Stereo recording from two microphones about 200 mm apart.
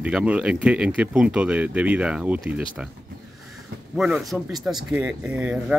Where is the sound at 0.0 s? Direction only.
5° right (ahead or behind).